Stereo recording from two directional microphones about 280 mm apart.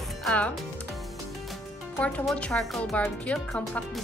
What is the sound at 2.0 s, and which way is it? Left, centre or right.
Speech, centre.